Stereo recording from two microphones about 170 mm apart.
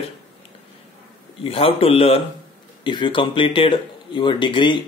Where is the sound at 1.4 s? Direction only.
35° left (ahead or behind).